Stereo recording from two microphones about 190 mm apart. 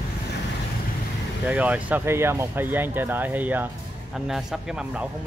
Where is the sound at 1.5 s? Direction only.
5° right (ahead or behind).